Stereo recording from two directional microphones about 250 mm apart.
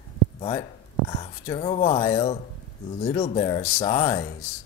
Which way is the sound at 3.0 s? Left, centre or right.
Left.